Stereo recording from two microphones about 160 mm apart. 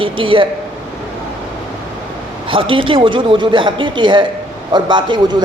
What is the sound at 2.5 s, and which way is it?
A man's voice, 30° right (ahead or behind).